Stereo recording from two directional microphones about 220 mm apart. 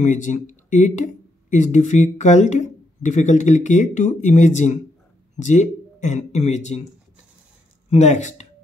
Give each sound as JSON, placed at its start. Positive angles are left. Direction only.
{"t": 0.0, "sound": "speech", "side_deg": 35}
{"t": 7.9, "sound": "speech", "side_deg": 30}